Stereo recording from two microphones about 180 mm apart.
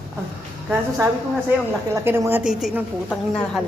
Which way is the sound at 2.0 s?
15° right (ahead or behind).